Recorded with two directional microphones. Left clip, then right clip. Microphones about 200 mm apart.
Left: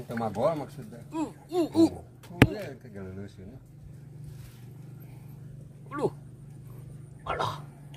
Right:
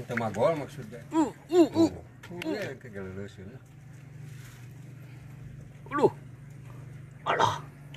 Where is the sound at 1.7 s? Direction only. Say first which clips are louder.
Left 2 dB; 15° left (ahead or behind).